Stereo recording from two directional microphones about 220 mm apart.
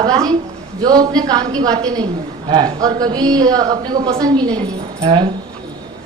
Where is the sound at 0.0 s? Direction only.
20° right (ahead or behind).